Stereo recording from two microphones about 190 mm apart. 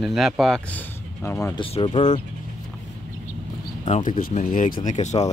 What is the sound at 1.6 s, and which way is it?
Speech, 25° left (ahead or behind).